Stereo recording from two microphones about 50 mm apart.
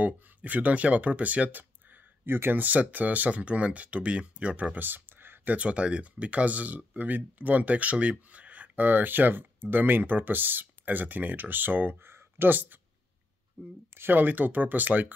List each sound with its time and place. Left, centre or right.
0.0 s speech: right
2.2 s speech: right
2.6 s speech: right
4.7 s a sound: right
5.5 s speech: right
12.0 s speech: right